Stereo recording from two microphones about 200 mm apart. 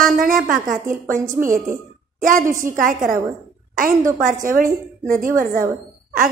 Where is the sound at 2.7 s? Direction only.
40° right (ahead or behind).